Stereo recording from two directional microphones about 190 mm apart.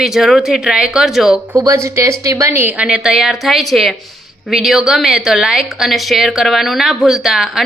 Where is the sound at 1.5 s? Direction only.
15° right (ahead or behind).